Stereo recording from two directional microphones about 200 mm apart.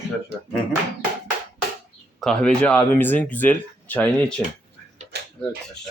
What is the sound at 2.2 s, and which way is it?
Speech, 5° left (ahead or behind).